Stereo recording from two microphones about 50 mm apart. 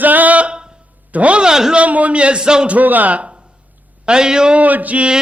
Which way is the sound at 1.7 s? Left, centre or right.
Right.